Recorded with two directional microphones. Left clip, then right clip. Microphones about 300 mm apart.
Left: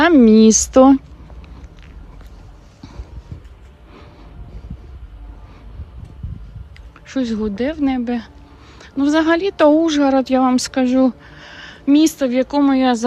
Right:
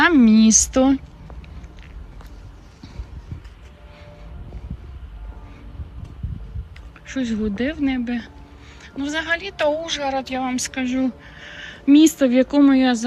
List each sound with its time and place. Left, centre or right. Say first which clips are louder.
0.0 s speech: left 4 dB; centre
7.1 s speech: left 4 dB; centre